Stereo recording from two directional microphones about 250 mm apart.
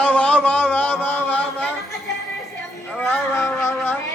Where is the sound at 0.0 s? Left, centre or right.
Centre.